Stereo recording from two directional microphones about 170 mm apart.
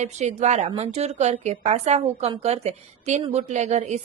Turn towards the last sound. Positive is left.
turn(degrees=-40)  # may be behind; listen again after turning